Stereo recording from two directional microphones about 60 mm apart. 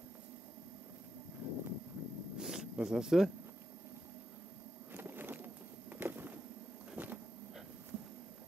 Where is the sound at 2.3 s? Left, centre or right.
Centre.